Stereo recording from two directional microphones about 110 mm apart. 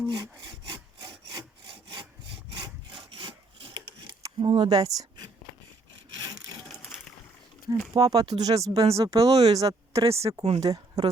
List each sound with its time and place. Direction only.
0.1 s wood: 40° right (ahead or behind)
4.4 s speech: 50° right (ahead or behind)
4.7 s a woman's voice: 35° right (ahead or behind)
7.9 s speech: 35° right (ahead or behind)
8.7 s speech: 65° right (ahead or behind)
9.0 s speech: 30° right (ahead or behind)